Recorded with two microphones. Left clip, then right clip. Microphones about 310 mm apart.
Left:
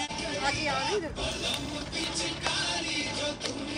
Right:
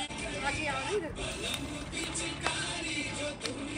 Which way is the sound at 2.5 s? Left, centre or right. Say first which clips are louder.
Left 5 dB; left.